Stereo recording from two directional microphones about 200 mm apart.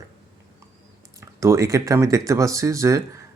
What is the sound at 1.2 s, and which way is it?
Speech, 15° right (ahead or behind).